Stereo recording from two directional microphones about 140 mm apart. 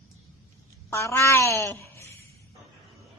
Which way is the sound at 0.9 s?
20° left (ahead or behind).